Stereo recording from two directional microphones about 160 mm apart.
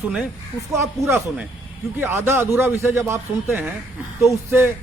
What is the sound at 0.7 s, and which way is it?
A man's voice, 15° right (ahead or behind).